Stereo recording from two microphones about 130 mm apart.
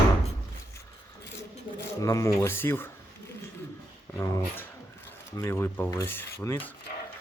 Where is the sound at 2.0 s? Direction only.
25° left (ahead or behind).